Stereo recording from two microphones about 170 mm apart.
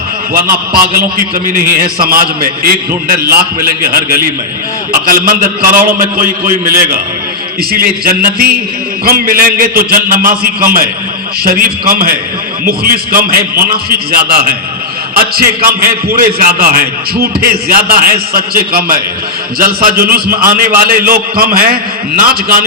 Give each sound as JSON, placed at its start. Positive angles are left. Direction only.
{"t": 0.5, "sound": "a man's voice", "side_deg": -65}
{"t": 7.7, "sound": "a man's voice", "side_deg": -60}